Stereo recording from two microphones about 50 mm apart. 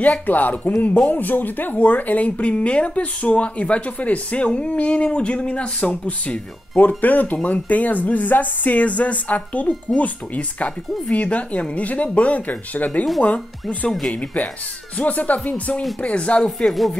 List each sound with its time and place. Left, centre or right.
0.3 s speech: left
16.4 s speech: centre